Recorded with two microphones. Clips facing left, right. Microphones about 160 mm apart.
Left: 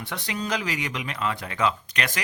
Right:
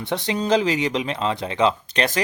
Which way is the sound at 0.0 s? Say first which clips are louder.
Right 7 dB; 30° right (ahead or behind).